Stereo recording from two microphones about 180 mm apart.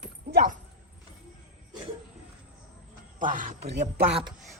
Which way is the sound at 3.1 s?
45° right (ahead or behind).